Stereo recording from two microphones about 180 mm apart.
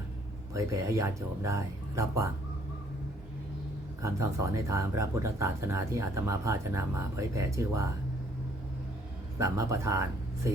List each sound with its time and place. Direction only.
0.5 s speech: 15° right (ahead or behind)
4.0 s speech: 15° right (ahead or behind)
9.4 s speech: 15° right (ahead or behind)